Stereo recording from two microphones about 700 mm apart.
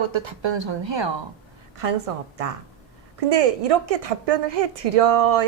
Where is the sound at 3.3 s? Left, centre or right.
Right.